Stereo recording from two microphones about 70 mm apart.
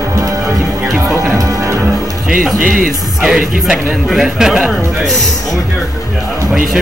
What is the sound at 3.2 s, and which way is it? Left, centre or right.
Speech, centre.